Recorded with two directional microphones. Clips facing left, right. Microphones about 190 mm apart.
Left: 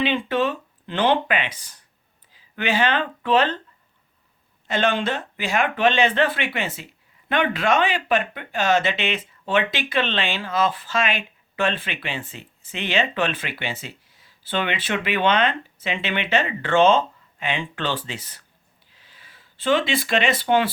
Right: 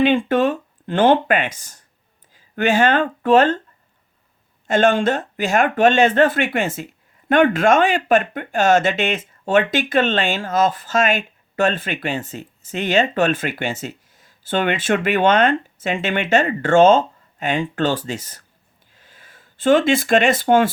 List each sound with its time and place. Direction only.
0.0 s speech: 50° right (ahead or behind)
4.6 s speech: 45° right (ahead or behind)
18.9 s a sound: 50° right (ahead or behind)